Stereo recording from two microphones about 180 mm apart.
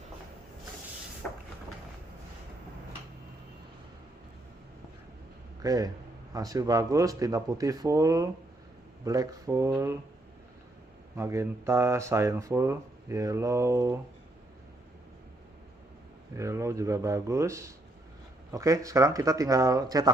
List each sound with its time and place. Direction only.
5.6 s speech: 20° right (ahead or behind)
11.2 s speech: 15° right (ahead or behind)
16.3 s speech: 15° right (ahead or behind)